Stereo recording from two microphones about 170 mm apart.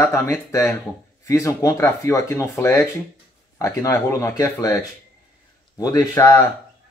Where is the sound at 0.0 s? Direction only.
15° left (ahead or behind).